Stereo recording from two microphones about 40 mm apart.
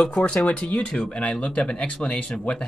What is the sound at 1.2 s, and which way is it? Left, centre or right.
Speech, left.